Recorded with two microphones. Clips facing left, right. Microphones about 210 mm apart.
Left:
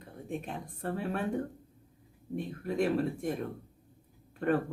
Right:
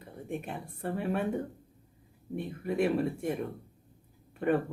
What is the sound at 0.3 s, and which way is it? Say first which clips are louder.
Speech: even; 10° right (ahead or behind).